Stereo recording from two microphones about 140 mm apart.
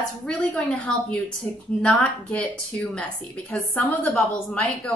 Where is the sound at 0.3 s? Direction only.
5° left (ahead or behind).